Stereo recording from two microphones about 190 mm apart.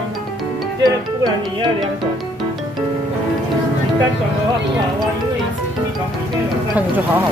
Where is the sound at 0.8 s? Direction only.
20° right (ahead or behind).